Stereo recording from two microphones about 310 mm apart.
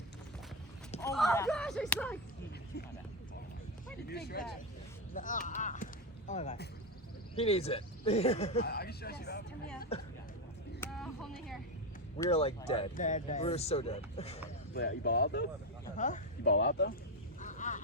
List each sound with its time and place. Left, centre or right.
0.9 s speech: centre
4.1 s speech: left
8.6 s speech: left
9.9 s speech: centre
10.8 s vehicle: centre
12.1 s speech: centre
14.7 s speech: left
17.4 s a sound: left